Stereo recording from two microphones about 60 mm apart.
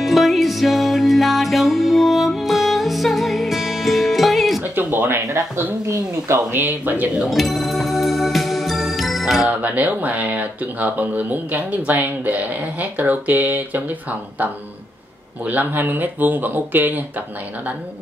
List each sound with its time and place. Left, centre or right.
0.0 s music: centre
4.7 s a sound: right
5.3 s speech: right
6.5 s speech: right
7.2 s music: centre
9.5 s speech: right
15.4 s speech: right